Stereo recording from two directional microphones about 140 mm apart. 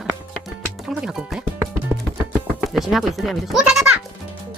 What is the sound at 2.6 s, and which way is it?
Speech, centre (ahead or behind).